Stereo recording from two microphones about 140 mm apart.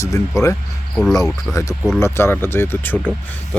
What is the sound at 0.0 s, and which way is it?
Speech, 20° left (ahead or behind).